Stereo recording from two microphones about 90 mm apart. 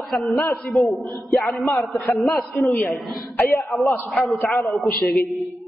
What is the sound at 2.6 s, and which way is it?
Speech, 20° left (ahead or behind).